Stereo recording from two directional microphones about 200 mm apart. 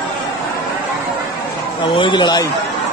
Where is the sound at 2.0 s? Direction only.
25° left (ahead or behind).